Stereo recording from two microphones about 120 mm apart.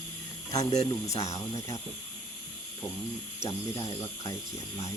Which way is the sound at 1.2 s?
25° left (ahead or behind).